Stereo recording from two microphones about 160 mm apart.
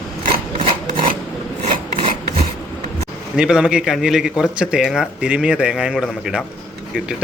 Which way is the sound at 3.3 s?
5° right (ahead or behind).